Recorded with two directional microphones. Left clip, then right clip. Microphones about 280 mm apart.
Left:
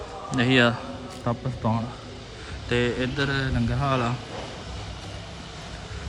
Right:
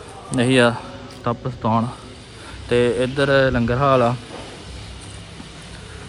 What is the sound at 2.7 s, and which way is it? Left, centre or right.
A man's voice, centre.